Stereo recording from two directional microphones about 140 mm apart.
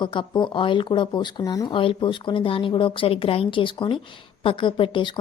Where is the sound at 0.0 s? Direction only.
35° left (ahead or behind).